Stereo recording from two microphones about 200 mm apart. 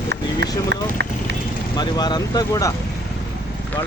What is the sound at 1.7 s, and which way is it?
Speech, 20° left (ahead or behind).